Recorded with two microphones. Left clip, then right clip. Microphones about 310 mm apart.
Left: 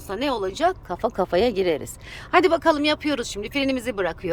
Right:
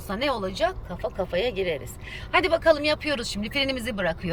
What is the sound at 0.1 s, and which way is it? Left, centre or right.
Speech, centre.